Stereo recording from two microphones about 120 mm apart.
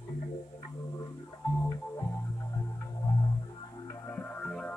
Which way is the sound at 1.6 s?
25° left (ahead or behind).